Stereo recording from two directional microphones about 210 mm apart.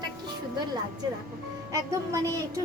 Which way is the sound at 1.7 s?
15° right (ahead or behind).